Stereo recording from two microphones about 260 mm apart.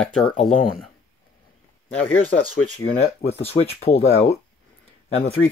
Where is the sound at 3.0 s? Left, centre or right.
Left.